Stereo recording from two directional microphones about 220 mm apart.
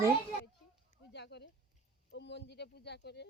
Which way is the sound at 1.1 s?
50° left (ahead or behind).